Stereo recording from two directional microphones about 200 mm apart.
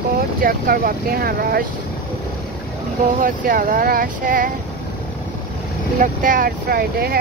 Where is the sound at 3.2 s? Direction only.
40° right (ahead or behind).